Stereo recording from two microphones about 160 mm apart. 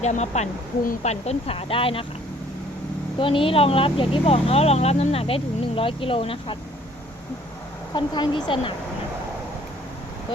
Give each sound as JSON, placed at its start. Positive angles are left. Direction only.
{"t": 0.0, "sound": "speech", "side_deg": 45}
{"t": 3.2, "sound": "speech", "side_deg": 35}
{"t": 7.9, "sound": "speech", "side_deg": 30}